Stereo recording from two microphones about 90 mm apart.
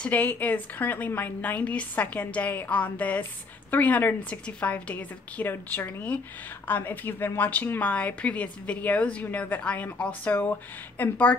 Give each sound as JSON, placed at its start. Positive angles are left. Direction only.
{"t": 0.0, "sound": "a woman's voice", "side_deg": 15}